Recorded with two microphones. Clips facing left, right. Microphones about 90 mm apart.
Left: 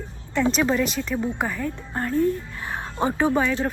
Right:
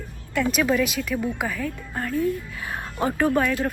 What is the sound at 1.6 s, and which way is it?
Speech, 20° left (ahead or behind).